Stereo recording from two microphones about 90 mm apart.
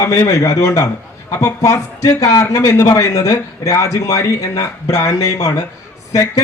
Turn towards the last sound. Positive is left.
turn(degrees=40)  # may be behind; listen again after turning